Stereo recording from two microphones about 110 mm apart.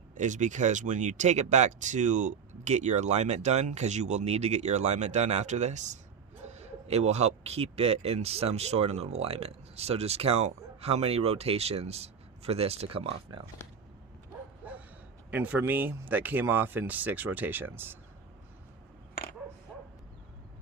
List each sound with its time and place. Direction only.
0.2 s speech: 90° right
6.6 s speech: 80° right; by 13.4 s 60° right (ahead or behind)
14.6 s bow-wow: 15° right (ahead or behind)
15.3 s speech: 15° right (ahead or behind)